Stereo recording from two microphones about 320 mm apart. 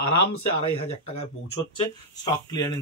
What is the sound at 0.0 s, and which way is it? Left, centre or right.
Speech, left.